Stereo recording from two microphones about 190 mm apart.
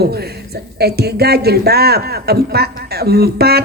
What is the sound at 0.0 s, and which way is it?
Speech, 55° right (ahead or behind).